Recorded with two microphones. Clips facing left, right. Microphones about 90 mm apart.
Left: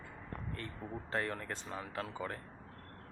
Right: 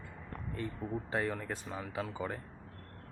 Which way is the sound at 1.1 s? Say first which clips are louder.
Right 1 dB; 10° right (ahead or behind).